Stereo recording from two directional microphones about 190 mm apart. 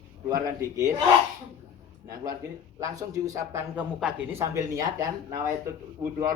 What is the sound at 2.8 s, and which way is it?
A man's voice, 15° right (ahead or behind).